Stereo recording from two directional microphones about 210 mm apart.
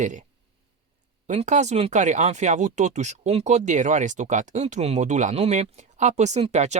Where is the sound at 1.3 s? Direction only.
35° right (ahead or behind).